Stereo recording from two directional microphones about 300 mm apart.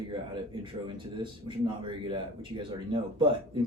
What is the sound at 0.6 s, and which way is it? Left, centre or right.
A man's voice, centre.